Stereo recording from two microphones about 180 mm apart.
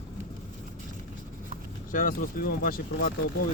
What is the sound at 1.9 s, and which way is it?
Speech, 50° left (ahead or behind).